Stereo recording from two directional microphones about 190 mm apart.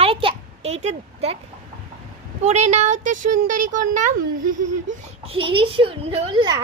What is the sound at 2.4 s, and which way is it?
Speech, 35° right (ahead or behind).